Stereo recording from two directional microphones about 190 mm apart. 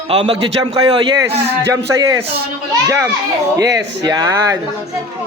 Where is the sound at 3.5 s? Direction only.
20° right (ahead or behind).